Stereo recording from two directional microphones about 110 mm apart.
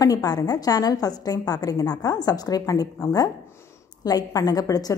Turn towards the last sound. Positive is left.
turn(degrees=35)  # may be behind; listen again after turning